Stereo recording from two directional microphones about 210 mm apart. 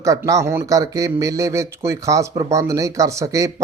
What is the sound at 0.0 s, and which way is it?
A man's voice, 15° right (ahead or behind).